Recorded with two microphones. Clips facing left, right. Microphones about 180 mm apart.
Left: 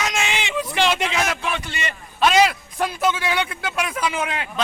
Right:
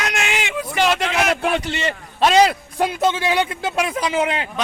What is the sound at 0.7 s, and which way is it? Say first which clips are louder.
Speech: right 2 dB; 5° right (ahead or behind).